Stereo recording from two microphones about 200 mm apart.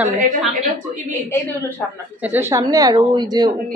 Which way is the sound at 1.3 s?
10° left (ahead or behind).